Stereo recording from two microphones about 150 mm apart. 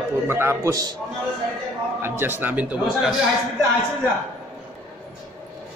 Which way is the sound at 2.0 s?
15° right (ahead or behind).